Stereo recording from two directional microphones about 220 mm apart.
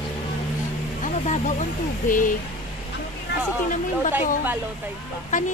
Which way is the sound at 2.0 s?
35° left (ahead or behind).